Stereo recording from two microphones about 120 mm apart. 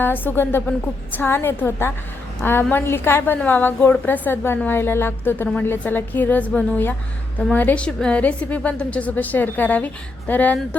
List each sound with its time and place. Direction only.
0.0 s a woman's voice: 15° left (ahead or behind)